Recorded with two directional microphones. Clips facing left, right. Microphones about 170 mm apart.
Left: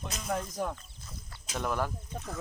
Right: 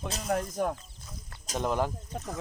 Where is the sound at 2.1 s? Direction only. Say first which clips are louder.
Right 3 dB; 70° right (ahead or behind).